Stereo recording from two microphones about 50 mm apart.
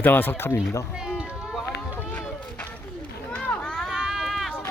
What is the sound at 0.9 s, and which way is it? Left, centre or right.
Run, centre.